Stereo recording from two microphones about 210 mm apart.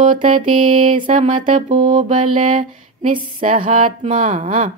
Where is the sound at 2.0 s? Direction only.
35° right (ahead or behind).